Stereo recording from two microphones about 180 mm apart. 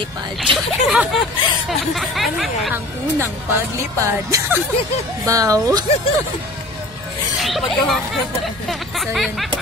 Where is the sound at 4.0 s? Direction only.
15° right (ahead or behind).